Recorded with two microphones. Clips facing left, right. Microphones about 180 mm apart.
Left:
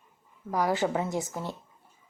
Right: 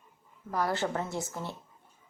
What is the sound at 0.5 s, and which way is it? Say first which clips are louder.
A woman's voice: left 4 dB; 15° left (ahead or behind).